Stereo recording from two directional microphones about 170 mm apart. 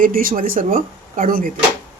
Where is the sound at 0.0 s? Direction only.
55° right (ahead or behind).